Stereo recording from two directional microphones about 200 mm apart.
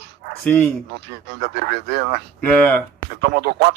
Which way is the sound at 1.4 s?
55° right (ahead or behind).